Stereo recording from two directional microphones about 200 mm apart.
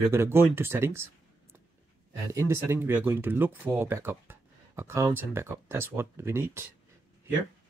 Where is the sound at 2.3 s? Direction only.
15° right (ahead or behind).